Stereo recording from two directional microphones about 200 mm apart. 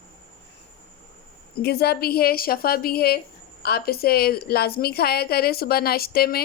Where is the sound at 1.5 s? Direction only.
50° left (ahead or behind).